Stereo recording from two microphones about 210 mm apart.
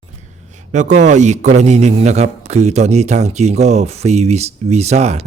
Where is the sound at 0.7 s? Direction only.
35° right (ahead or behind).